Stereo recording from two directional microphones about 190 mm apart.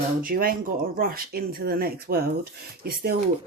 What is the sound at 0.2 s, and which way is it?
Speech, 50° right (ahead or behind).